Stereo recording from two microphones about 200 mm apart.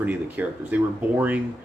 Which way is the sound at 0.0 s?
10° right (ahead or behind).